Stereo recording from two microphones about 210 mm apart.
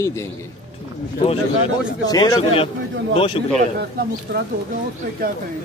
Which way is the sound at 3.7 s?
50° right (ahead or behind).